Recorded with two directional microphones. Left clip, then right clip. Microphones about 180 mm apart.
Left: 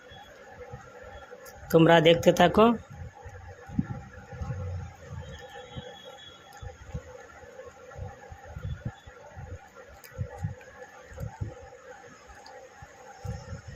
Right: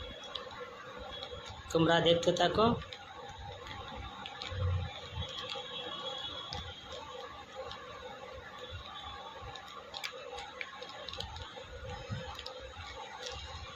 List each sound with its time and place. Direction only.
1.7 s a man's voice: 45° left (ahead or behind)